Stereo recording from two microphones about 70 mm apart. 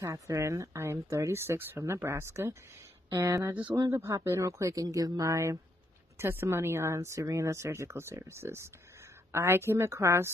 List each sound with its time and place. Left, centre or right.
0.0 s speech: right
3.1 s speech: right
4.8 s speech: right
5.3 s speech: right